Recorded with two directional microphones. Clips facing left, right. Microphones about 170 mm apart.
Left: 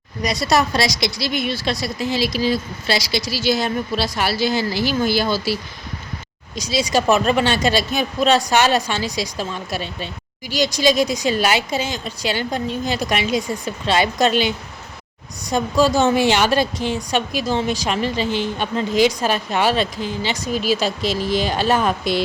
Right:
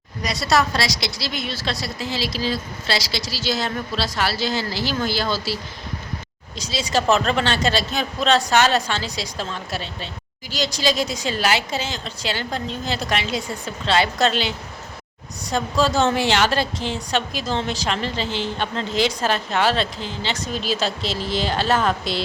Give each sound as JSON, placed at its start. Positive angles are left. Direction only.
{"t": 0.2, "sound": "a woman's voice", "side_deg": 15}
{"t": 6.6, "sound": "a woman's voice", "side_deg": 15}